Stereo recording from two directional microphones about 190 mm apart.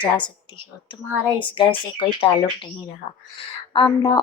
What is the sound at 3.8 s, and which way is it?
Speech, 20° left (ahead or behind).